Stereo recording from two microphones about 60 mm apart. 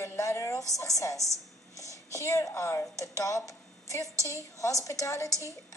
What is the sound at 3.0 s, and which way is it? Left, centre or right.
Speech, left.